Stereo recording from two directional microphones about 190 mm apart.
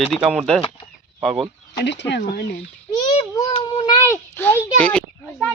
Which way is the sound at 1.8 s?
65° left (ahead or behind).